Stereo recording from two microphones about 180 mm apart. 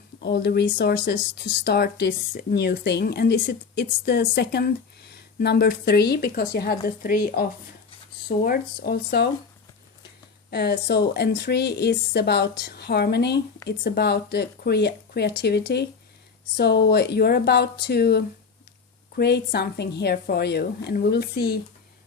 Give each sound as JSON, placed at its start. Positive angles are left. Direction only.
{"t": 0.2, "sound": "speech", "side_deg": 70}
{"t": 10.5, "sound": "speech", "side_deg": 65}